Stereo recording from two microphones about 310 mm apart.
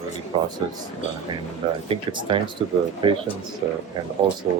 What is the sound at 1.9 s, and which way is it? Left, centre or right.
Speech, centre.